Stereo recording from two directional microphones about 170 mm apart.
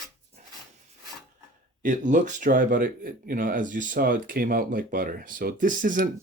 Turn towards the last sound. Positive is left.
turn(degrees=-50)  # may be behind; listen again after turning